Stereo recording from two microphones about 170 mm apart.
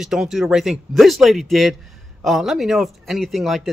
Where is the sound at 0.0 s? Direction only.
Centre (ahead or behind).